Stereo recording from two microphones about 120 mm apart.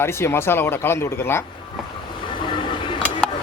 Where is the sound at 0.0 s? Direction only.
20° left (ahead or behind).